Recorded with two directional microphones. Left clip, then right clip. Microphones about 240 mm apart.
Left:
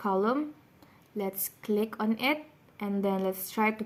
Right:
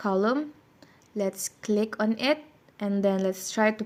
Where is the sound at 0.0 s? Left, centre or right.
Centre.